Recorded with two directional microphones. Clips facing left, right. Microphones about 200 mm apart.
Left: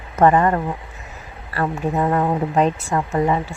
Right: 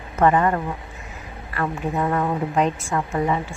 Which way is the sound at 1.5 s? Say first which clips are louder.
Left 3 dB; 30° left (ahead or behind).